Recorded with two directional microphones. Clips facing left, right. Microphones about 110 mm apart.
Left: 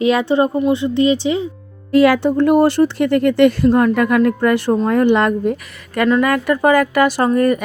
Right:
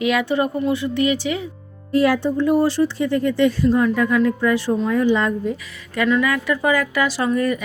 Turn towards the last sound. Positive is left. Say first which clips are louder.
# left 5 dB
turn(degrees=50)  # may be behind; listen again after turning